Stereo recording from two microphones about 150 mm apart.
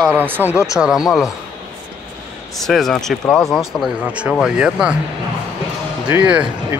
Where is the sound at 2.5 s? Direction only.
Centre (ahead or behind).